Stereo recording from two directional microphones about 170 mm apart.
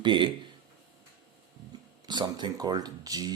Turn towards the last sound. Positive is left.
turn(degrees=-20)  # may be behind; listen again after turning